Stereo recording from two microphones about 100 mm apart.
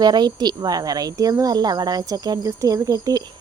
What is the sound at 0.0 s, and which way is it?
Speech, 45° right (ahead or behind).